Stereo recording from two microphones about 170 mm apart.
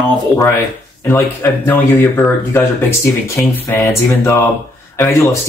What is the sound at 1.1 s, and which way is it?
Speech, 10° left (ahead or behind).